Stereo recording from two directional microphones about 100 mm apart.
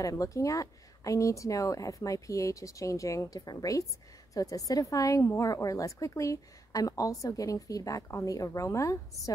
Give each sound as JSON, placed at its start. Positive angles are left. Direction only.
{"t": 0.0, "sound": "a woman's voice", "side_deg": 35}